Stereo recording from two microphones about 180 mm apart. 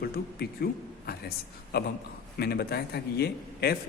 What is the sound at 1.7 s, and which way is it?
A man's voice, 60° left (ahead or behind).